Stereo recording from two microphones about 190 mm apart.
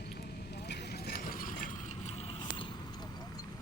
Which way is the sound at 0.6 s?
55° left (ahead or behind).